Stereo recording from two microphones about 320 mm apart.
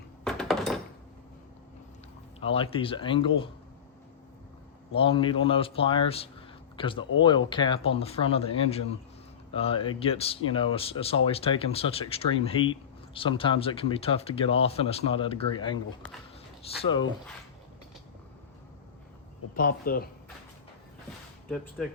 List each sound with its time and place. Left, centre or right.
0.3 s a sound: centre
2.4 s speech: centre
4.9 s speech: centre
19.5 s speech: left
21.5 s speech: centre